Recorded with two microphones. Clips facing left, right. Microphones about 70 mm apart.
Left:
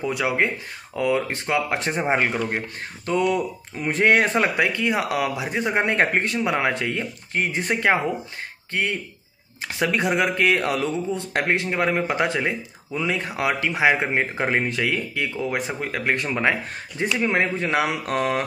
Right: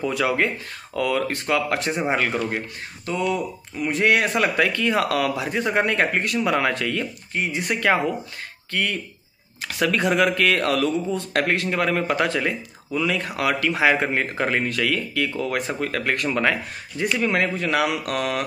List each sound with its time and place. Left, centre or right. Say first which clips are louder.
0.0 s speech: right 1 dB; centre
3.1 s speech: left 3 dB; left
4.6 s speech: right 1 dB; centre
7.3 s speech: left 1 dB; left
8.7 s speech: even; left